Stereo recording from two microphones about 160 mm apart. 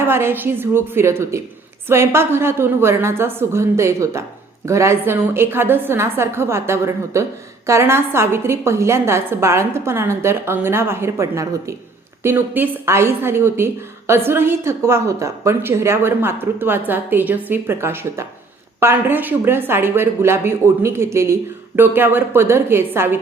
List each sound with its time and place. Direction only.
0.0 s a woman's voice: 15° right (ahead or behind)